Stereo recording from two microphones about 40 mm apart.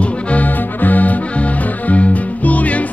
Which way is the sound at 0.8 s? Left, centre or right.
Left.